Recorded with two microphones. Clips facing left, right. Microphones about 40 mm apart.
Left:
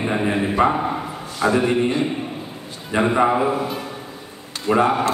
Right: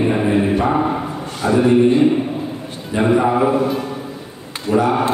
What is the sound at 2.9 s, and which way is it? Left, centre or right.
Speech, left.